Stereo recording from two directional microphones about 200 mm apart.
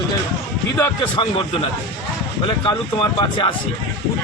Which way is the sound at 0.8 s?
25° left (ahead or behind).